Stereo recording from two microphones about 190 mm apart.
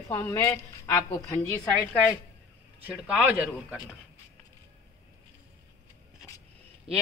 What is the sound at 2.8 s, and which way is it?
Speech, 10° right (ahead or behind).